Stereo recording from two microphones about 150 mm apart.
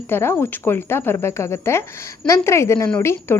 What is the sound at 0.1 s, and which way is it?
Speech, 15° left (ahead or behind).